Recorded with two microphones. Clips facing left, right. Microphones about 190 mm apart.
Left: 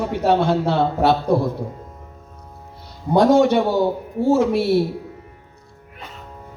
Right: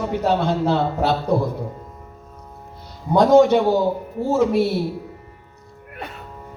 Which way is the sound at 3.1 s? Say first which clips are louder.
Right 1 dB; 60° left (ahead or behind).